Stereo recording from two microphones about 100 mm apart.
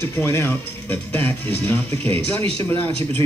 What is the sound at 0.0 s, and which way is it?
Speech, 25° left (ahead or behind).